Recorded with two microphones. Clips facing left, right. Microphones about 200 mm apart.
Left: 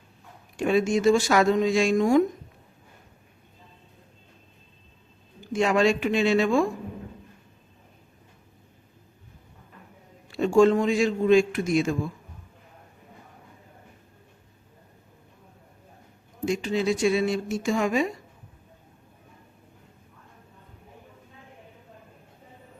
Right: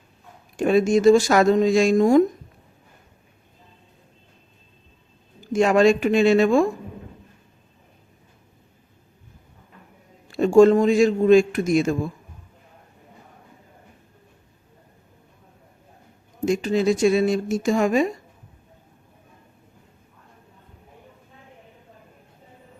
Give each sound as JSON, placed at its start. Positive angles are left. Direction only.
{"t": 0.5, "sound": "speech", "side_deg": -45}
{"t": 5.5, "sound": "a man's voice", "side_deg": -45}
{"t": 10.2, "sound": "a man's voice", "side_deg": -45}
{"t": 16.5, "sound": "a man's voice", "side_deg": -45}